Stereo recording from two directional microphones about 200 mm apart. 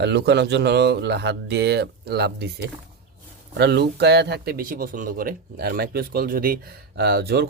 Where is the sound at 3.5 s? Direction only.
55° right (ahead or behind).